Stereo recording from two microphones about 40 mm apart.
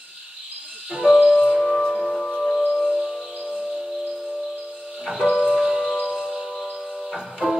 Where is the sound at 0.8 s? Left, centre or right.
Centre.